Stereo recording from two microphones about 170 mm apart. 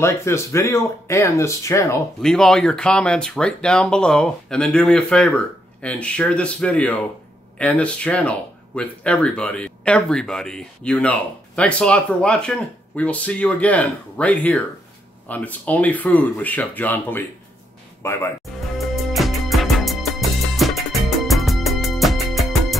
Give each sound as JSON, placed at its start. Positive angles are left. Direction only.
{"t": 0.0, "sound": "speech", "side_deg": 15}
{"t": 2.2, "sound": "speech", "side_deg": 5}
{"t": 18.8, "sound": "music", "side_deg": 0}